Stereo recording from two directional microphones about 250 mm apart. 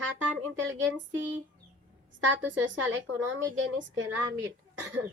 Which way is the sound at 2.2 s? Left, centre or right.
Right.